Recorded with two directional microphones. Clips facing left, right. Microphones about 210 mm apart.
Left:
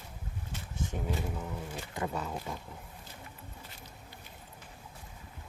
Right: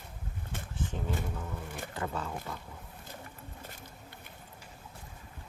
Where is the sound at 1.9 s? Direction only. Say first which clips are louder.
Left 1 dB; 10° left (ahead or behind).